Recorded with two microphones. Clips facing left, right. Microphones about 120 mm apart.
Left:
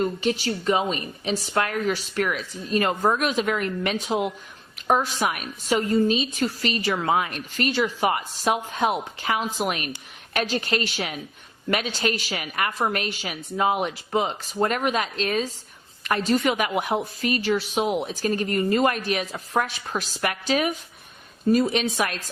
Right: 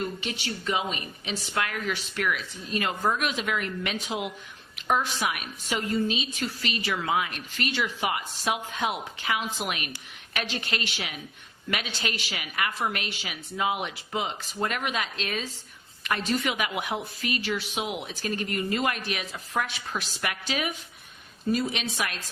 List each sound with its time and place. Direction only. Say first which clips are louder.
0.0 s a woman's voice: left 8 dB; 40° left (ahead or behind)